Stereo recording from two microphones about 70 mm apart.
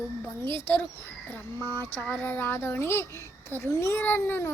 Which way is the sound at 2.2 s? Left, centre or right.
Left.